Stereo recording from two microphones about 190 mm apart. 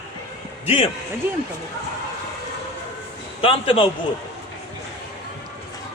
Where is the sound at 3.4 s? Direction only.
30° left (ahead or behind).